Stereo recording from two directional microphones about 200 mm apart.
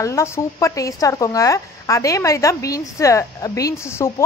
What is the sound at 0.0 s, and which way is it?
A woman's voice, 15° left (ahead or behind).